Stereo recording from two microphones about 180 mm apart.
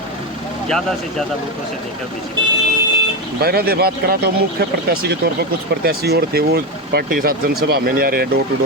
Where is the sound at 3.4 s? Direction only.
60° right (ahead or behind).